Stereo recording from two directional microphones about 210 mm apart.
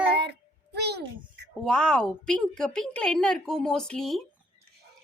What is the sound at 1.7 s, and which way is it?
A woman's voice, 5° left (ahead or behind).